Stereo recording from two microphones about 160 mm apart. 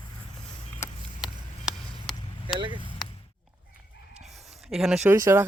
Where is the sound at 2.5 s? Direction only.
30° right (ahead or behind).